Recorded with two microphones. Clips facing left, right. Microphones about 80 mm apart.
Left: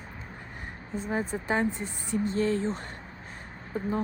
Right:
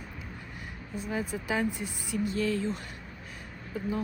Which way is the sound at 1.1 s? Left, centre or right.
Left.